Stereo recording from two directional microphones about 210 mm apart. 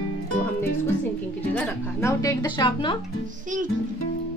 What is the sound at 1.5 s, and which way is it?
Speech, 10° left (ahead or behind).